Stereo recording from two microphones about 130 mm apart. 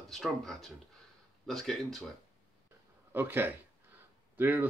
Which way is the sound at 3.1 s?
15° right (ahead or behind).